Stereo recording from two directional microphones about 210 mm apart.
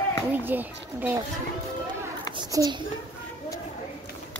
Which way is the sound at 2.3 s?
20° right (ahead or behind).